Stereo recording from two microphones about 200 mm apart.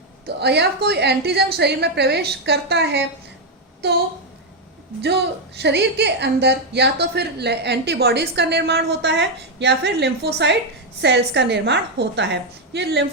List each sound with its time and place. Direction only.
0.3 s a woman's voice: 55° right (ahead or behind)
5.0 s a woman's voice: 55° right (ahead or behind)